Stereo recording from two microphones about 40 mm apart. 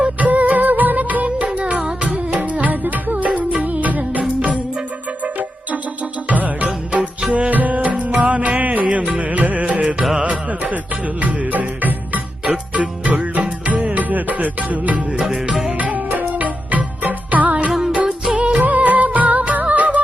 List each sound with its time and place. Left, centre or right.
0.2 s music: right